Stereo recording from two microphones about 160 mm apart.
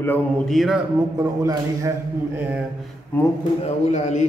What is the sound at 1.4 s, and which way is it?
Speech, 20° right (ahead or behind).